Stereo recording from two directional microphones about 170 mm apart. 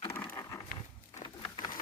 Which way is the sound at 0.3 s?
15° left (ahead or behind).